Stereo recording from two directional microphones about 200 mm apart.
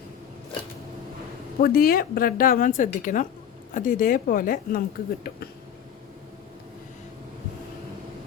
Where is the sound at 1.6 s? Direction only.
50° left (ahead or behind).